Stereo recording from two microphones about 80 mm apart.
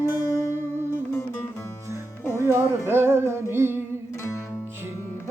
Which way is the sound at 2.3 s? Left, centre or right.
Right.